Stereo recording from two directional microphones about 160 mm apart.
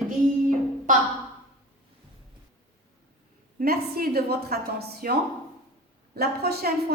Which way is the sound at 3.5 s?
70° right (ahead or behind).